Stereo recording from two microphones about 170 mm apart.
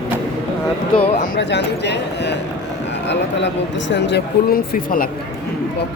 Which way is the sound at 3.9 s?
90° left.